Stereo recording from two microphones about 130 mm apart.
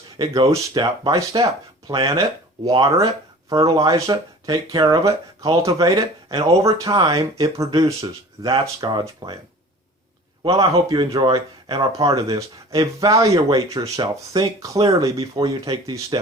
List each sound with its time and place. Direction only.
0.2 s speech: 25° right (ahead or behind)
10.4 s speech: 25° right (ahead or behind)